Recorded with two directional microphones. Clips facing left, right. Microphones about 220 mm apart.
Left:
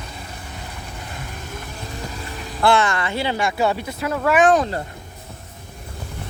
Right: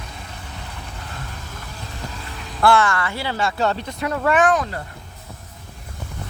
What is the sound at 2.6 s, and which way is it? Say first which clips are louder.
Speech: right 1 dB; 20° left (ahead or behind).